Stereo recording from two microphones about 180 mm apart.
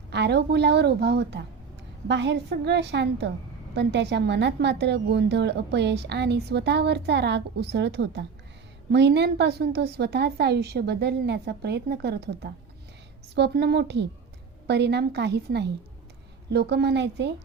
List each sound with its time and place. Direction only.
0.1 s a woman's voice: 70° right (ahead or behind)